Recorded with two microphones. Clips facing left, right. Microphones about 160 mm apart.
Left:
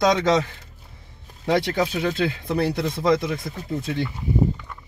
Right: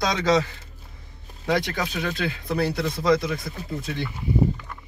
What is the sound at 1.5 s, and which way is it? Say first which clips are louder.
Speech: left 4 dB; 20° left (ahead or behind).